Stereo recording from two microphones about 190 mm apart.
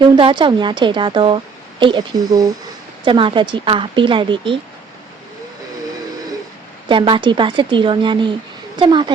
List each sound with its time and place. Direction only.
0.0 s a woman's voice: 25° right (ahead or behind)
6.8 s a woman's voice: 25° right (ahead or behind)